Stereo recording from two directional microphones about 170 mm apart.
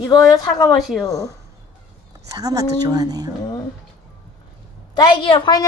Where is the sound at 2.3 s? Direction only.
20° right (ahead or behind).